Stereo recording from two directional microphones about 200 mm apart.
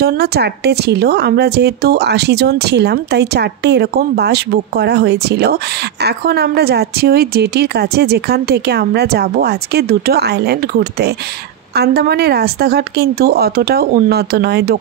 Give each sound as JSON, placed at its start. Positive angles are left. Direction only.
{"t": 0.0, "sound": "speech", "side_deg": -50}